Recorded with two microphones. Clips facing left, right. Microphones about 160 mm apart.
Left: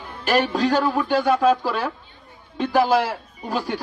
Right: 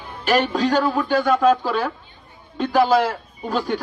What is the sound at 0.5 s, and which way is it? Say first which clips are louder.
A man's voice: right 1 dB; 10° left (ahead or behind).